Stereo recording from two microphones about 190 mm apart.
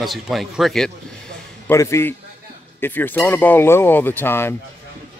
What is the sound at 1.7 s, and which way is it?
Speech, 15° left (ahead or behind).